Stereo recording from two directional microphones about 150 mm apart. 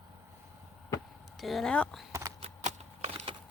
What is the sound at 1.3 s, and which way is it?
Speech, centre (ahead or behind).